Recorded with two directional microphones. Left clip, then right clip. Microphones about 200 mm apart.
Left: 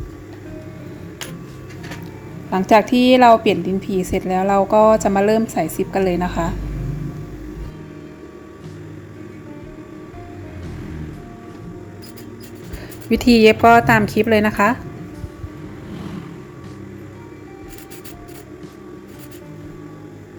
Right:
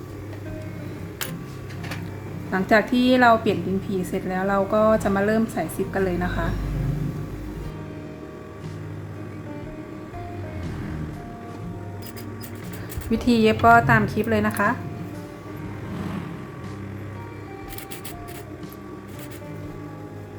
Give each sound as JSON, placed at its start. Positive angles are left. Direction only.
{"t": 2.5, "sound": "a woman's voice", "side_deg": 30}
{"t": 13.1, "sound": "a woman's voice", "side_deg": 30}